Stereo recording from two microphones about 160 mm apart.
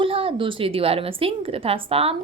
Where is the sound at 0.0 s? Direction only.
35° right (ahead or behind).